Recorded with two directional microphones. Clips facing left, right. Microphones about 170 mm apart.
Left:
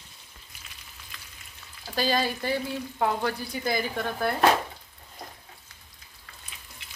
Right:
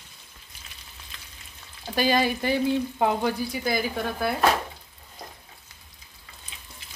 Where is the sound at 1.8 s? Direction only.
15° right (ahead or behind).